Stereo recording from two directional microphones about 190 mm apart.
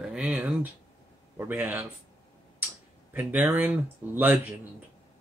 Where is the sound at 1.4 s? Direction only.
10° right (ahead or behind).